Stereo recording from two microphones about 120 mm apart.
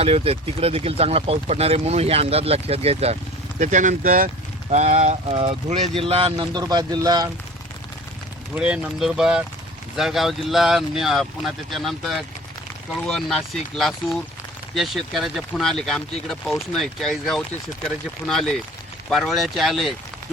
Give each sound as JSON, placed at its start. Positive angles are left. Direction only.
{"t": 0.0, "sound": "speech", "side_deg": -55}
{"t": 3.6, "sound": "speech", "side_deg": -90}
{"t": 4.7, "sound": "speech", "side_deg": -75}
{"t": 5.3, "sound": "speech", "side_deg": -45}
{"t": 6.3, "sound": "speech", "side_deg": -35}
{"t": 8.5, "sound": "speech", "side_deg": -10}